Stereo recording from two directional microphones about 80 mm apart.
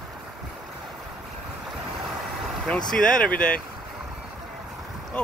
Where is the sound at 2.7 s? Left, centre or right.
Centre.